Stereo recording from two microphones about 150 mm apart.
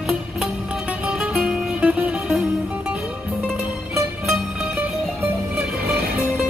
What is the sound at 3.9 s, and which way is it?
Music, 15° right (ahead or behind).